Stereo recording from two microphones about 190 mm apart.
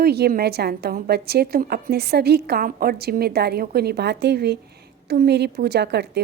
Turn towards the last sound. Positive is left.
turn(degrees=-60)  # may be behind; listen again after turning